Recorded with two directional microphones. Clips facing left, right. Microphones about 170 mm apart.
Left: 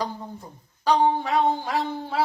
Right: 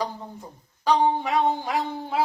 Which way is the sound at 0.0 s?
15° right (ahead or behind).